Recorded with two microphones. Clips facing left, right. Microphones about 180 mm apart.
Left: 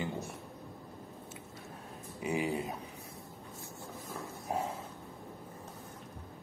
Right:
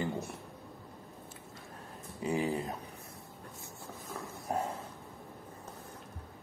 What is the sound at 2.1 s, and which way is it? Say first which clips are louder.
Speech: right 1 dB; 10° left (ahead or behind).